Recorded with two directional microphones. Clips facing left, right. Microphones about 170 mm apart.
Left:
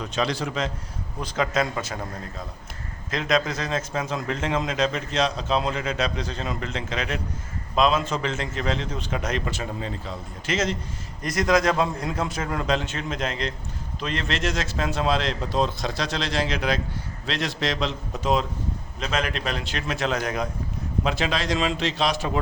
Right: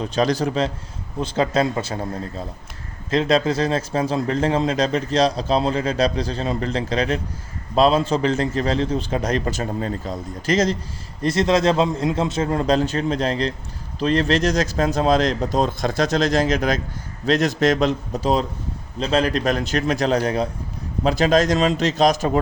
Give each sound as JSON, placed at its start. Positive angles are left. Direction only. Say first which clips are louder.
{"t": 0.0, "sound": "a man's voice", "louder": "right 6 dB", "side_deg": -40}
{"t": 3.1, "sound": "a man's voice", "louder": "right 6 dB", "side_deg": -30}